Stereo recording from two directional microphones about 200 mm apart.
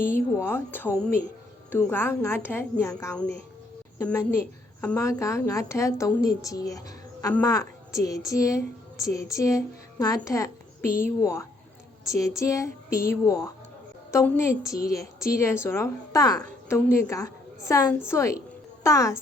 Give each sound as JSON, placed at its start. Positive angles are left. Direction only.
{"t": 0.0, "sound": "a woman's voice", "side_deg": 10}